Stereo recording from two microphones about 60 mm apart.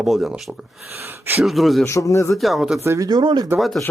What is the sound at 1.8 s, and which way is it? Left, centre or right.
Speech, left.